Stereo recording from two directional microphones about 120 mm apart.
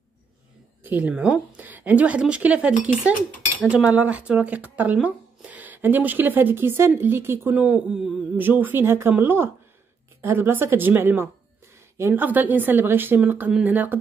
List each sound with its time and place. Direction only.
0.8 s speech: 15° right (ahead or behind)
8.4 s speech: 15° right (ahead or behind)